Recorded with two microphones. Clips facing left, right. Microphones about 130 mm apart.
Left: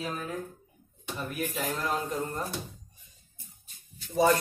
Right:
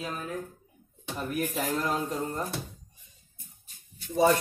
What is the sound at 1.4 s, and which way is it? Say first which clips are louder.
Speech: right 2 dB; 40° right (ahead or behind).